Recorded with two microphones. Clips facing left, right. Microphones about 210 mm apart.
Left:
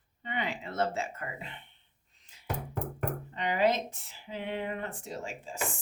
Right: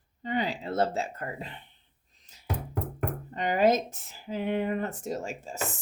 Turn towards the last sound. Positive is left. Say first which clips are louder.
# right 5 dB
turn(degrees=-45)  # may be behind; listen again after turning